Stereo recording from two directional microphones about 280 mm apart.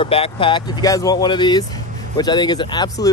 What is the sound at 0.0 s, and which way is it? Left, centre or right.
Speech, centre.